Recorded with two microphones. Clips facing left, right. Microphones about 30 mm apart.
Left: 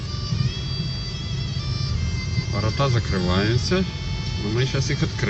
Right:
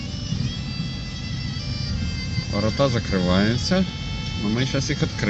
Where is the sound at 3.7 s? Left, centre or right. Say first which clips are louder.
Even; left.